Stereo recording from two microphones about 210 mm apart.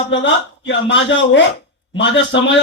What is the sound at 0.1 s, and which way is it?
A man's voice, 60° left (ahead or behind).